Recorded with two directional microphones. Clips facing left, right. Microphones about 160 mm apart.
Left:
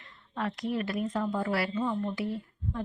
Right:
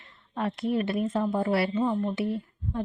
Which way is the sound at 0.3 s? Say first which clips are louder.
Right 4 dB; 30° right (ahead or behind).